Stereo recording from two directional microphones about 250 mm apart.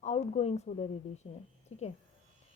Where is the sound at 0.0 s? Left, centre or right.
Left.